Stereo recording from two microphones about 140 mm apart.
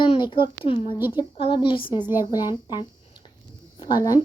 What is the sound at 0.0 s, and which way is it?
A child's voice, 35° left (ahead or behind).